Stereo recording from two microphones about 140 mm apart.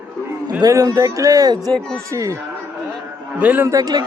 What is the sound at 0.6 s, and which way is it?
Speech, 25° right (ahead or behind).